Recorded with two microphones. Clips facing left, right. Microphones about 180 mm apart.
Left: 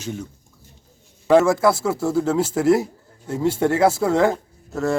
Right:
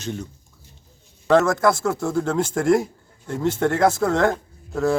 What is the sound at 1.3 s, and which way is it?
Speech, 10° left (ahead or behind).